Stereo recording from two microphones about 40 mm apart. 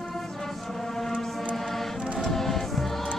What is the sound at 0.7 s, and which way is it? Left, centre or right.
Music, centre.